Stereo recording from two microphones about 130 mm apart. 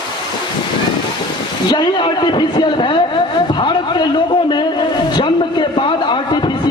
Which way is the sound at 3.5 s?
35° left (ahead or behind).